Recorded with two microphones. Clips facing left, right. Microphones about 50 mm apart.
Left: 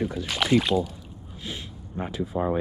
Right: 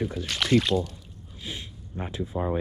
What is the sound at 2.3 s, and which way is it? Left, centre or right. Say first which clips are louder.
Speech: left 3 dB; left.